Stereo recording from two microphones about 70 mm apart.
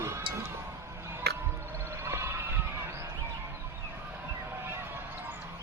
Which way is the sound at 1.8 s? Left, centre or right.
Right.